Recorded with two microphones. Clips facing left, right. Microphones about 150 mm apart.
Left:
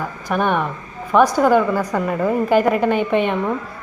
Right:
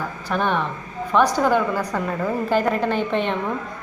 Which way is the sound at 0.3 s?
10° left (ahead or behind).